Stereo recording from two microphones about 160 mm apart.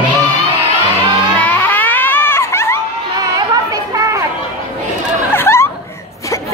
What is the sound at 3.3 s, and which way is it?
Chatter, 20° right (ahead or behind).